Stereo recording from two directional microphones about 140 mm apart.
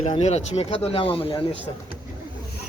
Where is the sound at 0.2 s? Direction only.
50° left (ahead or behind).